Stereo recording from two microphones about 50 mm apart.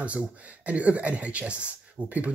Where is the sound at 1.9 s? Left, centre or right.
Right.